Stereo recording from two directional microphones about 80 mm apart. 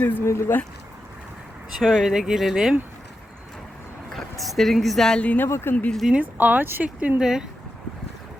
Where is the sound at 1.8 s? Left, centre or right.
Centre.